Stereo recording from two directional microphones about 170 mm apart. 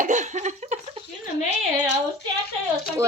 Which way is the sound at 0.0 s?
45° right (ahead or behind).